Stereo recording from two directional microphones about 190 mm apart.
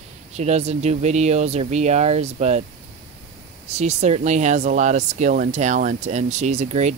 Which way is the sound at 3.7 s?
35° right (ahead or behind).